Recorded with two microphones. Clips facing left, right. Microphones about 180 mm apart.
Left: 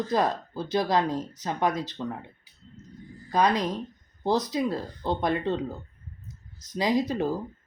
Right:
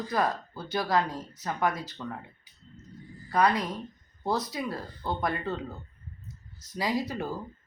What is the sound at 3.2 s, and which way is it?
Speech, 20° left (ahead or behind).